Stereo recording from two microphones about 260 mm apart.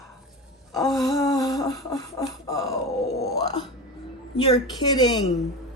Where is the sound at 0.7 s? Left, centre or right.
Centre.